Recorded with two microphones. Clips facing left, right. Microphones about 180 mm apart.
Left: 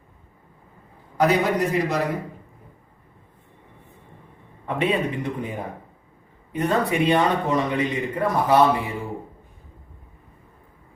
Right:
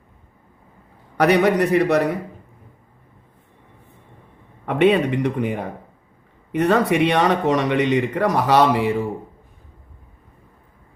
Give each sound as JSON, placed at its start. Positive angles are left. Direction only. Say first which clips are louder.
{"t": 1.1, "sound": "a man's voice", "louder": "right 4 dB", "side_deg": -75}
{"t": 4.6, "sound": "speech", "louder": "right 7 dB", "side_deg": -80}